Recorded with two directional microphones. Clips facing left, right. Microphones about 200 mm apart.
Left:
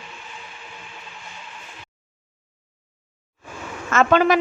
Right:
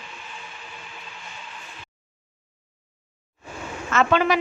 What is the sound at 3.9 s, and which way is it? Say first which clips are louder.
Speech: left 3 dB; 45° left (ahead or behind).